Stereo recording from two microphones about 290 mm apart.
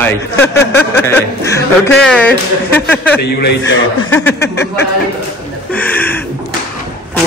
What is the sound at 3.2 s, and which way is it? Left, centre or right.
Speech, left.